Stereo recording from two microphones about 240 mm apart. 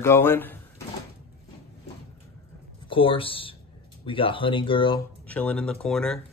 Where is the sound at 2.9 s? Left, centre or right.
Left.